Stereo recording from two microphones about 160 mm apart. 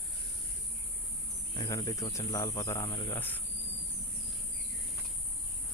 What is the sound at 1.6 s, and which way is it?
Speech, 20° left (ahead or behind).